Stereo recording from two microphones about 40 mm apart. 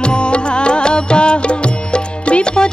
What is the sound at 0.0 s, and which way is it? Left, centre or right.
Music, left.